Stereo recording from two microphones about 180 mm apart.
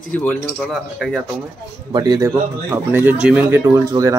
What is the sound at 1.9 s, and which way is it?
Speech, 25° right (ahead or behind).